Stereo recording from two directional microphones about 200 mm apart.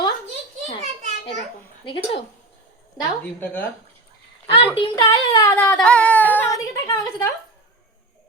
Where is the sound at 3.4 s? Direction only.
5° left (ahead or behind).